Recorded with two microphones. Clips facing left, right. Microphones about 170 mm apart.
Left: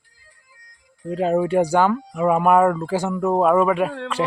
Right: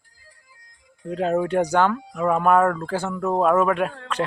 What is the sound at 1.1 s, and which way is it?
Speech, 5° left (ahead or behind).